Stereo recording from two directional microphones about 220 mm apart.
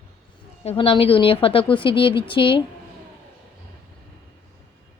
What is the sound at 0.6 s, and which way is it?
A woman's voice, 25° left (ahead or behind).